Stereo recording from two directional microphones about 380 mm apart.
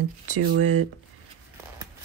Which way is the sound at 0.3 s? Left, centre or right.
Right.